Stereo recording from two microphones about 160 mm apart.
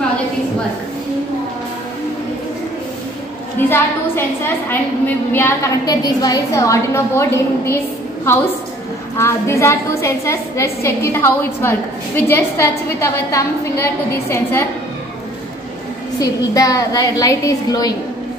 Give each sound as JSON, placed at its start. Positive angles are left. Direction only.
{"t": 3.5, "sound": "a woman's voice", "side_deg": 15}
{"t": 9.1, "sound": "a woman's voice", "side_deg": 15}
{"t": 16.2, "sound": "a woman's voice", "side_deg": 20}